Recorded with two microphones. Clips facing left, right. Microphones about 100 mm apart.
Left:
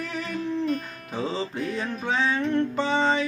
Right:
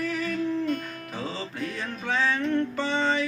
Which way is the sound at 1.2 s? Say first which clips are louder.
Left 5 dB; 20° left (ahead or behind).